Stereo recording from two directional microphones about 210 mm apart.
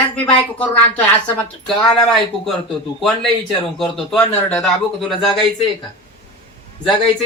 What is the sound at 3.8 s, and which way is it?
Speech, centre (ahead or behind).